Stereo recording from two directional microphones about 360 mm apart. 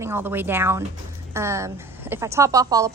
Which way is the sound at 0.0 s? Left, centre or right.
Centre.